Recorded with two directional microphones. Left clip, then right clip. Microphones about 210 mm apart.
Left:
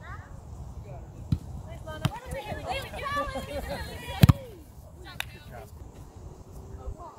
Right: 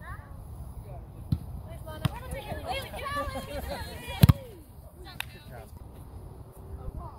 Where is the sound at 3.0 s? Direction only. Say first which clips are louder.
Left 4 dB; 45° right (ahead or behind).